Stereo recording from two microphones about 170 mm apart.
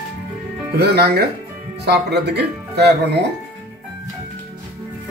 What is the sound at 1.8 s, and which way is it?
Speech, 80° right.